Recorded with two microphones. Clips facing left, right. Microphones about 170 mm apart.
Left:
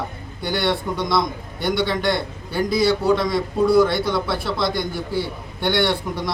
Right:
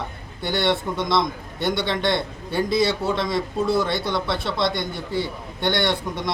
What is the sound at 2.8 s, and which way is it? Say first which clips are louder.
Speech: left 5 dB; 25° right (ahead or behind).